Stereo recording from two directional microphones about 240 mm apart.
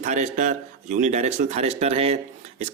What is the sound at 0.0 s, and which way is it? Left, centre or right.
Speech, right.